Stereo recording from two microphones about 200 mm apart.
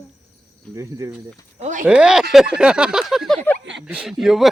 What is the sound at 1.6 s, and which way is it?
Speech, 40° right (ahead or behind).